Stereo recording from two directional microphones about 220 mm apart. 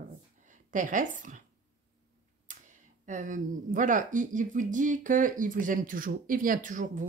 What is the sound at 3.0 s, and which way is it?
Speech, 35° right (ahead or behind).